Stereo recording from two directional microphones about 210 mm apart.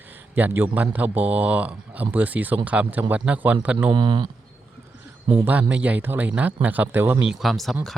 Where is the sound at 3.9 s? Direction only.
25° right (ahead or behind).